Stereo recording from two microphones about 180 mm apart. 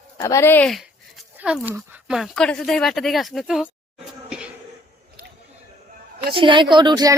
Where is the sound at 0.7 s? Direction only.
Centre (ahead or behind).